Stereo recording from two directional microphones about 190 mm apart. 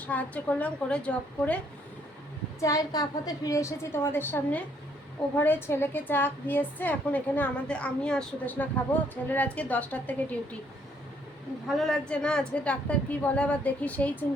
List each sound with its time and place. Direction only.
0.0 s a woman's voice: 10° left (ahead or behind)
2.6 s a woman's voice: 15° left (ahead or behind)
11.8 s a woman's voice: 5° left (ahead or behind)